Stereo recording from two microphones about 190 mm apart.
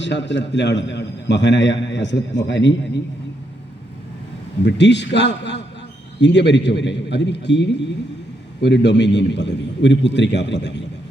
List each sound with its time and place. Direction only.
0.0 s a man's voice: 70° left (ahead or behind)
4.6 s a man's voice: 65° left (ahead or behind)